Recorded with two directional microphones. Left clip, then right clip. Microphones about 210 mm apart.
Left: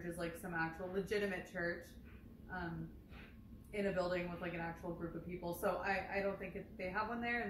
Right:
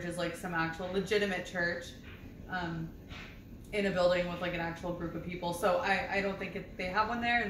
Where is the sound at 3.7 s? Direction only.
10° right (ahead or behind).